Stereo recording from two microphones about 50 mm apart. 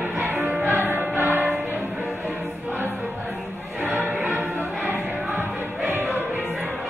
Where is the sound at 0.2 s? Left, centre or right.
Right.